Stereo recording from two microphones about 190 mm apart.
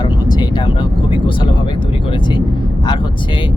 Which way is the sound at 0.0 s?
20° left (ahead or behind).